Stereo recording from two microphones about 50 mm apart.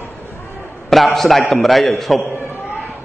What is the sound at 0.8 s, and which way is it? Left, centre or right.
A man's voice, centre.